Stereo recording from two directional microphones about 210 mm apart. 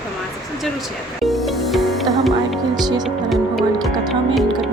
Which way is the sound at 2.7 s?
20° right (ahead or behind).